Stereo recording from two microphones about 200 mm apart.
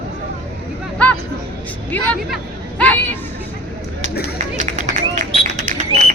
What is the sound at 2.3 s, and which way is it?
Chatter, 5° left (ahead or behind).